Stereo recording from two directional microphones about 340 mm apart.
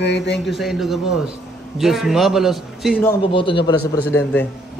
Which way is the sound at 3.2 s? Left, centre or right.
Centre.